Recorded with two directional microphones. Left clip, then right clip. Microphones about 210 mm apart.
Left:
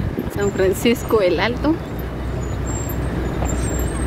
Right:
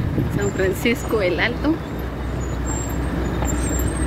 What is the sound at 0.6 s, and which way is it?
Speech, 20° left (ahead or behind).